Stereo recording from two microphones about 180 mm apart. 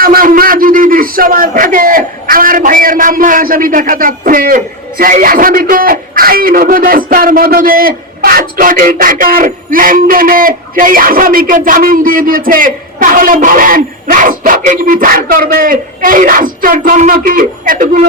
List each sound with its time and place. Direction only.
0.0 s a man's voice: 55° right (ahead or behind)